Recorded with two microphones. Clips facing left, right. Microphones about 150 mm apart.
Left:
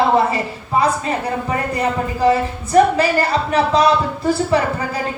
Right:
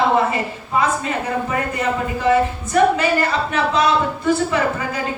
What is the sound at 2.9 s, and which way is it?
Speech, 35° left (ahead or behind).